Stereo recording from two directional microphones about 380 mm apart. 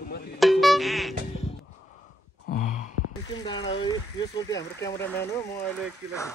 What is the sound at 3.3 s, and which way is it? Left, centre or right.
Speech, centre.